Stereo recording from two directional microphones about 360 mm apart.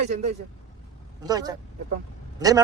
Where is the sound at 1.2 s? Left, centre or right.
Centre.